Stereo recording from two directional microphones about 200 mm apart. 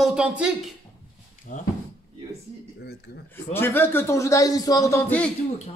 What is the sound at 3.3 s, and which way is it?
A man's voice, 10° left (ahead or behind).